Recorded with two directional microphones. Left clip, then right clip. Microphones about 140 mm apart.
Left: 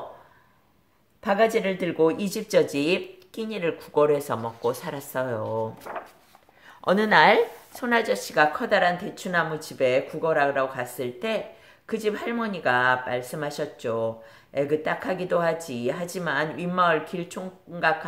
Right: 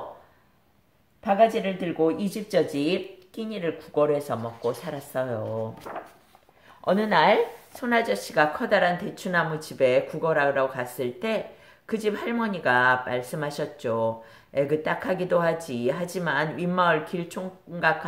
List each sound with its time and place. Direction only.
1.2 s speech: 50° left (ahead or behind); by 5.5 s 35° left (ahead or behind)
5.9 s speech: 20° left (ahead or behind)
6.8 s speech: 35° left (ahead or behind); by 17.9 s centre (ahead or behind)